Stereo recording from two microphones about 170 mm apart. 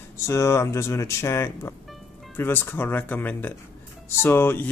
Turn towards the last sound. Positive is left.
turn(degrees=15)  # may be behind; listen again after turning